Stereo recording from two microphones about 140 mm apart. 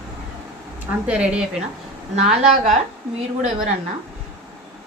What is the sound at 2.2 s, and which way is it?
Speech, 55° right (ahead or behind).